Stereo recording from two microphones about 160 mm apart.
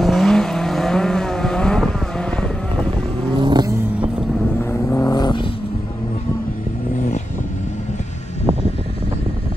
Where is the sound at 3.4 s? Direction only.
30° right (ahead or behind).